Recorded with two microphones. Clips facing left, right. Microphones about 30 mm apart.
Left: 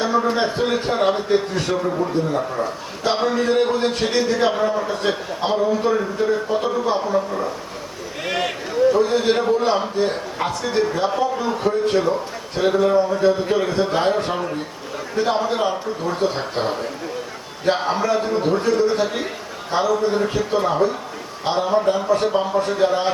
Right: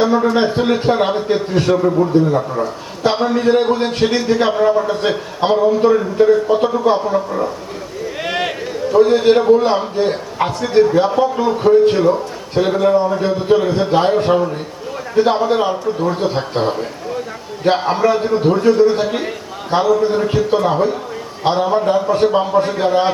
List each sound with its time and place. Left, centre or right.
0.0 s a man's voice: centre
3.3 s a man's voice: centre
8.2 s a sound: centre
9.0 s a man's voice: centre